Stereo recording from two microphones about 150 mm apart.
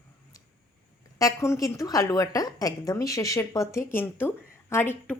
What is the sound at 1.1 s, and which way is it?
A woman's voice, 20° left (ahead or behind).